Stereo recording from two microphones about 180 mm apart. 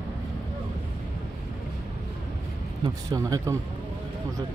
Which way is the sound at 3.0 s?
20° right (ahead or behind).